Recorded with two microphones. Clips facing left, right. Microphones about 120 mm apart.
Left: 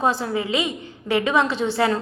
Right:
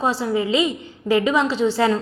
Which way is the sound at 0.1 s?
30° right (ahead or behind).